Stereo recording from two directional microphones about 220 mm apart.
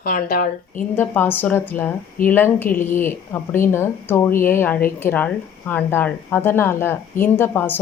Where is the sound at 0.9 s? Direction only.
10° left (ahead or behind).